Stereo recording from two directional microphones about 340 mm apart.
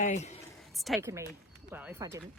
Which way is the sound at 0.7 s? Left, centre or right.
Centre.